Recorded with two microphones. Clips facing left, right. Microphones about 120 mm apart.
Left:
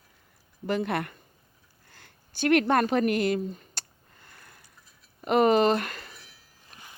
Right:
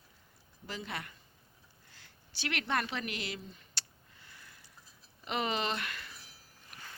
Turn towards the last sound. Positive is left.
turn(degrees=30)  # may be behind; listen again after turning